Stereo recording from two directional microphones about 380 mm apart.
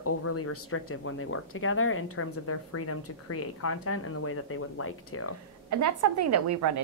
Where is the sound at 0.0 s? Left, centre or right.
Left.